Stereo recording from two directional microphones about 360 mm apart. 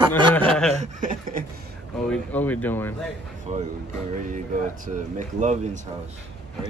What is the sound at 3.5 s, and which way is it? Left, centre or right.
Speech, centre.